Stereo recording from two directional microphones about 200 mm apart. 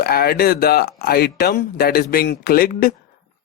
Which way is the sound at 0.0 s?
50° left (ahead or behind).